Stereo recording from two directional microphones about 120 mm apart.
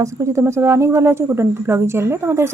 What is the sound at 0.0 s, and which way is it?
Speech, 25° right (ahead or behind).